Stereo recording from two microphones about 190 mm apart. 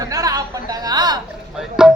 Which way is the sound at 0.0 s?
20° right (ahead or behind).